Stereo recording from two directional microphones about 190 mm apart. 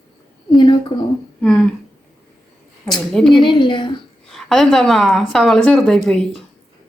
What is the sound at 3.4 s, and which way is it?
Speech, 25° left (ahead or behind).